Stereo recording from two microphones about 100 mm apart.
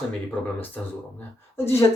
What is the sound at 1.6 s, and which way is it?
Speech, 20° left (ahead or behind).